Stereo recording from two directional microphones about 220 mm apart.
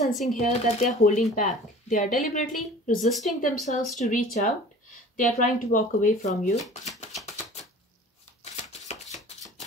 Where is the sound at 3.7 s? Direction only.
35° left (ahead or behind).